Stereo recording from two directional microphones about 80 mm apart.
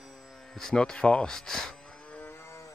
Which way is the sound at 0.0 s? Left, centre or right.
Centre.